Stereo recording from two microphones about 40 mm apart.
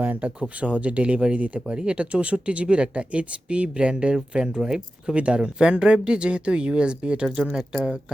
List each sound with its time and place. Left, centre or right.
0.0 s speech: right
0.3 s speech: right
5.1 s speech: right